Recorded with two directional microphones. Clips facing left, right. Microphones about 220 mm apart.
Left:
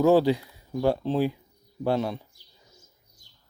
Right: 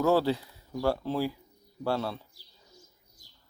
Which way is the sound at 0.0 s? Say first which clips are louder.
Left 5 dB; 15° left (ahead or behind).